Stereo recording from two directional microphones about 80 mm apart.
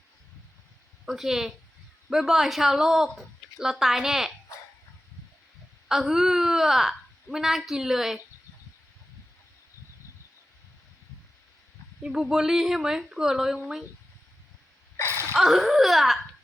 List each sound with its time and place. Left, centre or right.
1.0 s speech: centre
5.9 s a woman's voice: centre
12.0 s speech: centre
15.0 s a sound: right
15.4 s speech: centre